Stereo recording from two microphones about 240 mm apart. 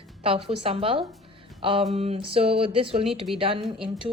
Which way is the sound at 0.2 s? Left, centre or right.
Right.